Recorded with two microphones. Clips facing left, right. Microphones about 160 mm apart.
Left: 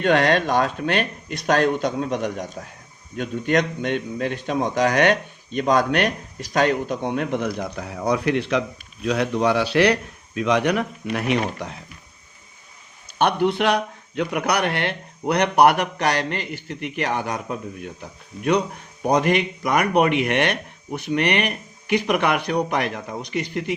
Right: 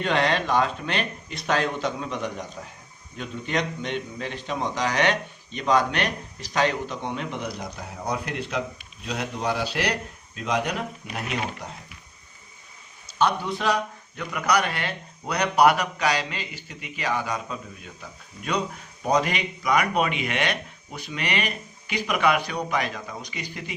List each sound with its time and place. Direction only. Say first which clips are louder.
0.0 s speech: left 5 dB; 50° left (ahead or behind)
7.8 s speech: left 7 dB; 85° left
13.1 s a man's voice: left 5 dB; 65° left (ahead or behind)